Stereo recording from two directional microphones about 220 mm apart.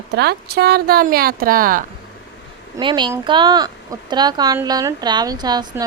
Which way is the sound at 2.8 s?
20° right (ahead or behind).